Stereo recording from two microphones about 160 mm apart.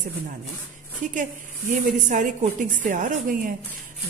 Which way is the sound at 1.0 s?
55° right (ahead or behind).